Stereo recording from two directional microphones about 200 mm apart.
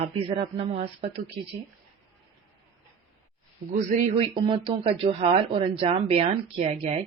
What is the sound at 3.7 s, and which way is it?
A woman's voice, 35° right (ahead or behind).